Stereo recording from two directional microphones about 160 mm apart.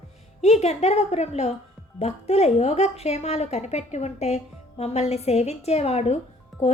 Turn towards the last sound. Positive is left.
turn(degrees=0)  # may be behind; listen again after turning